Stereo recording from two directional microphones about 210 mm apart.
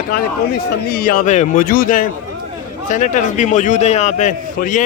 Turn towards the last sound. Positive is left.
turn(degrees=35)  # may be behind; listen again after turning